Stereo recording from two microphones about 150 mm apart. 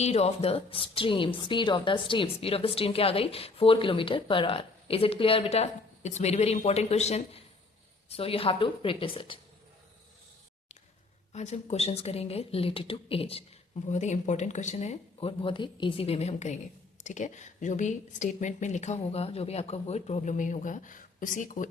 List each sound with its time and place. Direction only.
0.0 s a woman's voice: 45° left (ahead or behind)
11.3 s a woman's voice: 50° left (ahead or behind)
13.9 s a woman's voice: 50° left (ahead or behind)
15.3 s a woman's voice: 35° left (ahead or behind); by 21.7 s 60° left (ahead or behind)